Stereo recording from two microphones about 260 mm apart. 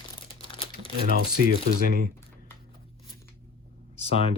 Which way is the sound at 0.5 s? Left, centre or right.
Centre.